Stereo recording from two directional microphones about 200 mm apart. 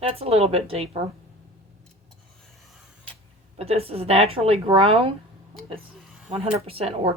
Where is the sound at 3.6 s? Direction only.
30° right (ahead or behind).